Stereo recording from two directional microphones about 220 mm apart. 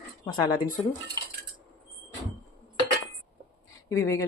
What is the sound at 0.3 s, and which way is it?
Speech, 20° left (ahead or behind).